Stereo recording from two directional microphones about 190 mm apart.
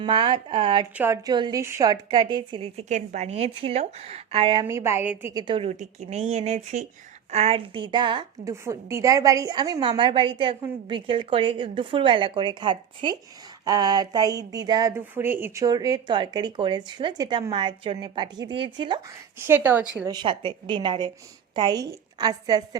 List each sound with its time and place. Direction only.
0.0 s a woman's voice: 25° right (ahead or behind)
0.9 s a woman's voice: 15° right (ahead or behind)
4.6 s a woman's voice: 15° right (ahead or behind)
19.5 s speech: 10° right (ahead or behind)
20.1 s a woman's voice: 25° right (ahead or behind)